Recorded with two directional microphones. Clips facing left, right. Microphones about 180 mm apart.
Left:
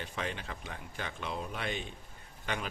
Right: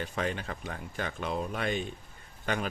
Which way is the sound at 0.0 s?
45° right (ahead or behind).